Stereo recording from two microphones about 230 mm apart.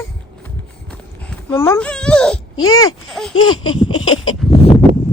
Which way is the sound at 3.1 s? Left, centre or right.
Centre.